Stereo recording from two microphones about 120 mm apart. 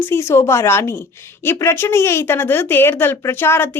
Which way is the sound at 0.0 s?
20° left (ahead or behind).